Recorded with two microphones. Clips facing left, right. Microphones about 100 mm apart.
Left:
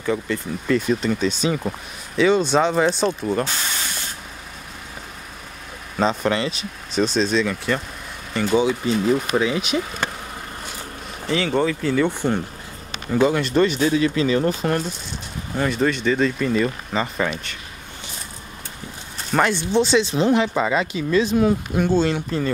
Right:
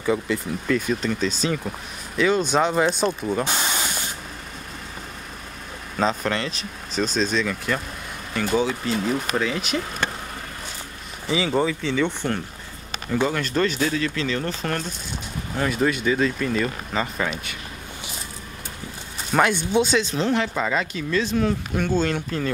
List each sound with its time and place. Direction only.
0.0 s speech: 5° right (ahead or behind)
3.4 s spray: 15° right (ahead or behind)
5.9 s speech: centre (ahead or behind)
11.2 s speech: 5° right (ahead or behind)
15.5 s speech: centre (ahead or behind)
19.3 s speech: 5° right (ahead or behind)